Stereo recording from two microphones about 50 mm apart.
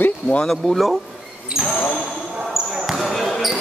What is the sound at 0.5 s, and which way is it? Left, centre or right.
Speech, centre.